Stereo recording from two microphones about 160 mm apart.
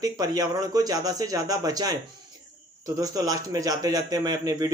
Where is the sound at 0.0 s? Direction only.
25° right (ahead or behind).